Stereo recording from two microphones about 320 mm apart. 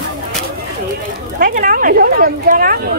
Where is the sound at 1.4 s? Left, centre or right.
Right.